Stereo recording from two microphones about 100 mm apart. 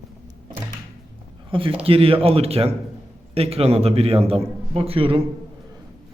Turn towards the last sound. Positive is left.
turn(degrees=-70)  # may be behind; listen again after turning